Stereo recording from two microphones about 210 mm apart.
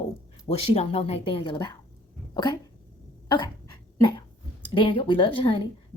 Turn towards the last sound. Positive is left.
turn(degrees=25)  # may be behind; listen again after turning